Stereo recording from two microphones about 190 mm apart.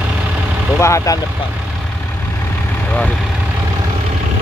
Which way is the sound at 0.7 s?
15° left (ahead or behind).